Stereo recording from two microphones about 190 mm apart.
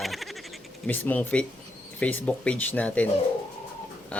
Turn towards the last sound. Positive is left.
turn(degrees=5)  # may be behind; listen again after turning